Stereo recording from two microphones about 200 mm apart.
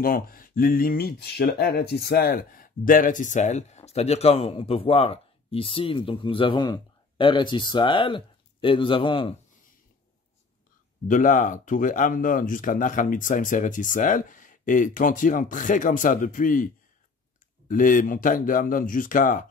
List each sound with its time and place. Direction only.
0.0 s speech: 45° left (ahead or behind); by 9.3 s 25° left (ahead or behind)
11.1 s speech: 40° left (ahead or behind)
17.6 s speech: 40° left (ahead or behind)